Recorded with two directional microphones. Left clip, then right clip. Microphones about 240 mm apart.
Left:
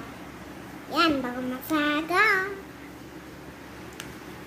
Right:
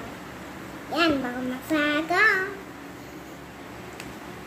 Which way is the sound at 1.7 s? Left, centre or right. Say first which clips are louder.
Right 1 dB; centre.